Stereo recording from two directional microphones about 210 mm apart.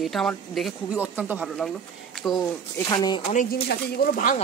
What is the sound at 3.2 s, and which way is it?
Speech, 40° left (ahead or behind).